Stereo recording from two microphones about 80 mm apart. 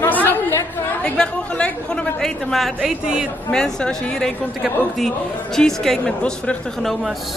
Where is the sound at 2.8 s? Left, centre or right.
Centre.